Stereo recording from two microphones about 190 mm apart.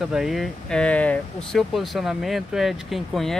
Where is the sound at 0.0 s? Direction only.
Centre (ahead or behind).